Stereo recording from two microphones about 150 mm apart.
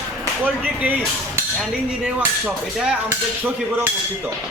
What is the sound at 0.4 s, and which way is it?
Hammer, 10° right (ahead or behind).